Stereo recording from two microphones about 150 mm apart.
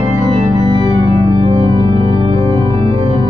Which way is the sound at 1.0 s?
45° right (ahead or behind).